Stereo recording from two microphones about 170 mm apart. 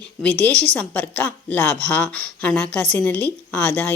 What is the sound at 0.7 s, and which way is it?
A woman's voice, 10° left (ahead or behind).